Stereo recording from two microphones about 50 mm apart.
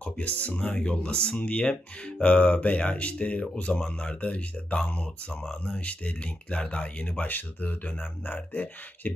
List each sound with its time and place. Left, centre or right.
0.0 s speech: left